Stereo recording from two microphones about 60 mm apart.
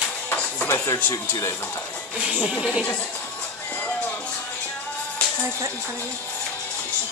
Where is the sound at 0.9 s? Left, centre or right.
Left.